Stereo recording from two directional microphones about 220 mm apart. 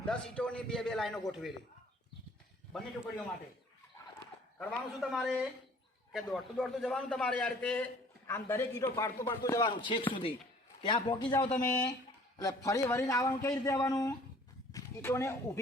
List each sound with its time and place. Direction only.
0.0 s a man's voice: 5° left (ahead or behind)
4.5 s a man's voice: 5° left (ahead or behind); by 11.5 s 20° left (ahead or behind)
11.5 s a man's voice: 5° left (ahead or behind)